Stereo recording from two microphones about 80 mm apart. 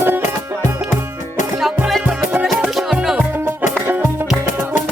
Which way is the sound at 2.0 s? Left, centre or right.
Centre.